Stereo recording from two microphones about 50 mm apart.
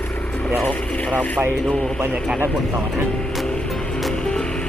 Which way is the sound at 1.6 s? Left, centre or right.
Left.